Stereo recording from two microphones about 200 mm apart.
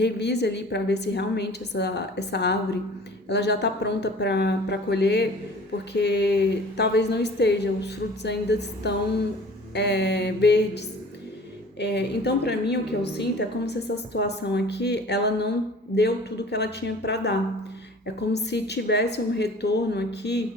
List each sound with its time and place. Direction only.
0.0 s a woman's voice: 55° left (ahead or behind)
11.8 s a woman's voice: 55° left (ahead or behind)